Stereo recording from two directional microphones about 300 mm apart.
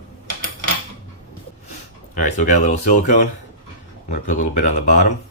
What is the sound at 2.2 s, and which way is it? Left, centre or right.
Speech, left.